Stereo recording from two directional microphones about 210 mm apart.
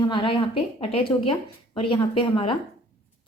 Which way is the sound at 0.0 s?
25° left (ahead or behind).